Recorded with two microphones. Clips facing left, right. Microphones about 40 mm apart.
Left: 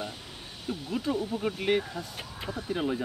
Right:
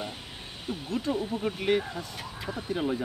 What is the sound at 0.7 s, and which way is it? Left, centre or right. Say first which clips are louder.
Speech: even; centre.